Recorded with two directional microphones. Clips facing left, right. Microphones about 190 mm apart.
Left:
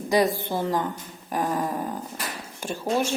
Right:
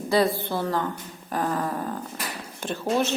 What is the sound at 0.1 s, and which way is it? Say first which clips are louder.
A woman's voice: even; 15° left (ahead or behind).